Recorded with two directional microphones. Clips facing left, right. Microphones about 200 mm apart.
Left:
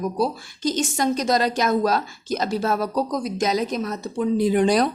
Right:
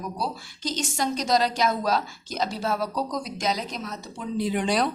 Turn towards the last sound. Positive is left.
turn(degrees=45)  # may be behind; listen again after turning